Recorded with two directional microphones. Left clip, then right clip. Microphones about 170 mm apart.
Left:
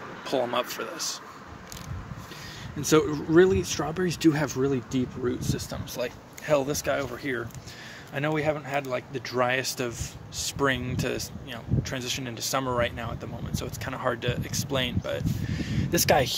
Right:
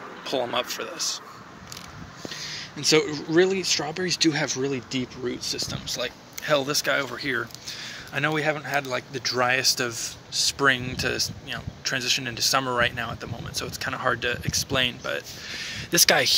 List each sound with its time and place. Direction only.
0.3 s speech: 30° left (ahead or behind)
2.4 s a sound: 50° left (ahead or behind)
3.3 s speech: 45° left (ahead or behind)
6.4 s speech: 15° left (ahead or behind)